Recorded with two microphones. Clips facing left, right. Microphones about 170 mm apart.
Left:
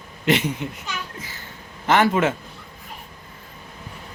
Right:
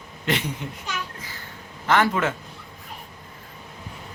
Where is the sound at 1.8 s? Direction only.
20° left (ahead or behind).